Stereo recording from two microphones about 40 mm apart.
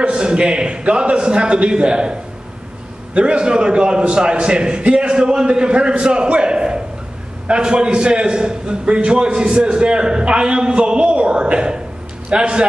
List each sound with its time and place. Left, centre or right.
0.0 s a man's voice: right
3.2 s a man's voice: right